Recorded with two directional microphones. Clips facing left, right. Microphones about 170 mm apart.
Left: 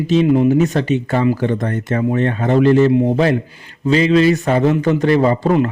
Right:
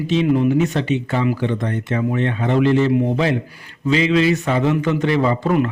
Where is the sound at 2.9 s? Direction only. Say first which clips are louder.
Left 3 dB; 25° left (ahead or behind).